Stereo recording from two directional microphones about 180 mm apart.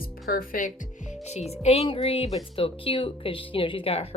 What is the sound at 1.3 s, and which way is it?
A woman's voice, 35° left (ahead or behind).